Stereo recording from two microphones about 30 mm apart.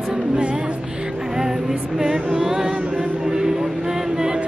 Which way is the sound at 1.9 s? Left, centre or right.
Centre.